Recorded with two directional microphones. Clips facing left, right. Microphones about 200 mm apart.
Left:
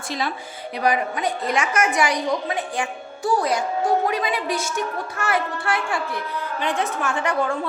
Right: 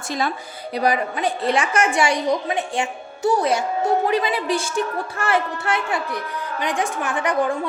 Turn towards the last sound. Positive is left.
turn(degrees=-20)  # may be behind; listen again after turning